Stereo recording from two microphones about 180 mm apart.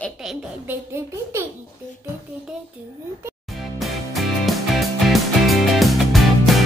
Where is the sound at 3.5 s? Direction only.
Centre (ahead or behind).